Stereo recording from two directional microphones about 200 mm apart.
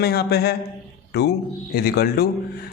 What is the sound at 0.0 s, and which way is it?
Speech, 50° left (ahead or behind).